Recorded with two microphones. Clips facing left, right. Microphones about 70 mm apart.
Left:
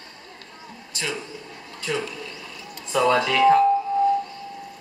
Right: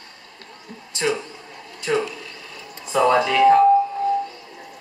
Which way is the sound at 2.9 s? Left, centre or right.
Centre.